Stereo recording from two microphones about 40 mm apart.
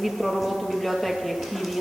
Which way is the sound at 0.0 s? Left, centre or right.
Centre.